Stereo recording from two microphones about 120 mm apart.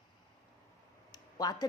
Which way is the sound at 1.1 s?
35° left (ahead or behind).